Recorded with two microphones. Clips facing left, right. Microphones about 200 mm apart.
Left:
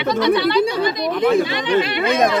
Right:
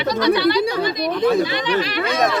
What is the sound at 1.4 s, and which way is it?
Speech, 25° left (ahead or behind).